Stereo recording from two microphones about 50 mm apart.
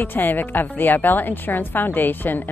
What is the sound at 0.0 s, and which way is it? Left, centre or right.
Speech, left.